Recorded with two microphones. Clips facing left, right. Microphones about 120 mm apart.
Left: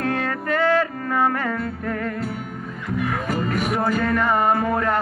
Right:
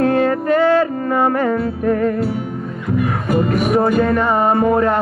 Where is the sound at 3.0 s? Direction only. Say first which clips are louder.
Right 6 dB; centre (ahead or behind).